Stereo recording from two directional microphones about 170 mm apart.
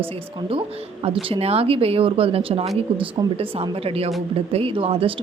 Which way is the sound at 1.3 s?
35° right (ahead or behind).